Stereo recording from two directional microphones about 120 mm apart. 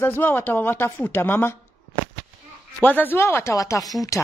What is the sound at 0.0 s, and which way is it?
A woman's voice, 20° left (ahead or behind).